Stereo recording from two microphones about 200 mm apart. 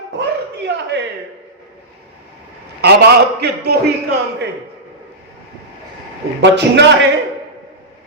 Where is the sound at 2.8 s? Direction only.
55° right (ahead or behind).